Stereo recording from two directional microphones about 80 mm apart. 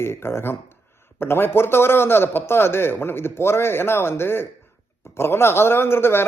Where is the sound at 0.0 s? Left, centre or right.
Left.